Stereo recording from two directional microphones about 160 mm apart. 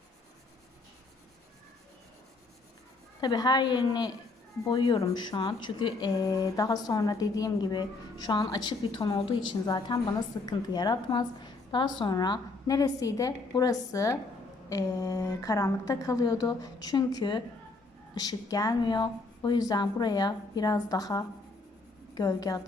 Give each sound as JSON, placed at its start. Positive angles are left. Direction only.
{"t": 3.2, "sound": "speech", "side_deg": 25}